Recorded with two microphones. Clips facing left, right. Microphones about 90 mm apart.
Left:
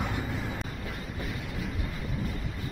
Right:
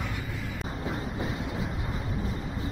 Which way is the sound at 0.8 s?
25° right (ahead or behind).